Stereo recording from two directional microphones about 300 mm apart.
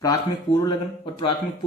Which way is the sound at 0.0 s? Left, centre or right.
Centre.